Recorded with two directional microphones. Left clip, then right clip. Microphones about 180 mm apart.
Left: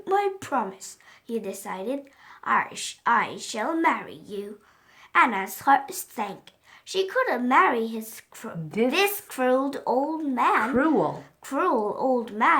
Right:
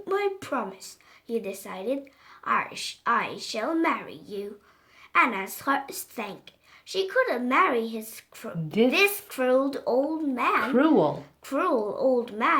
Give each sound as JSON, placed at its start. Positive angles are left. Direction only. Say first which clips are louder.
{"t": 0.0, "sound": "a woman's voice", "louder": "left 3 dB", "side_deg": 50}
{"t": 10.6, "sound": "speech", "louder": "right 1 dB", "side_deg": -15}
{"t": 11.1, "sound": "a woman's voice", "louder": "right 1 dB", "side_deg": 45}